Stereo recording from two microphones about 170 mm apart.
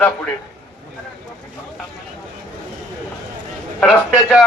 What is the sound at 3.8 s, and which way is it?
Speech, 10° left (ahead or behind).